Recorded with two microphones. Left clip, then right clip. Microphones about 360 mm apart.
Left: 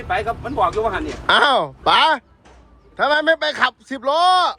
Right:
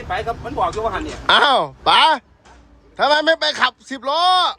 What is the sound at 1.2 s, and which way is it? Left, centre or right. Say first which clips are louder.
A man's voice: right 1 dB; centre.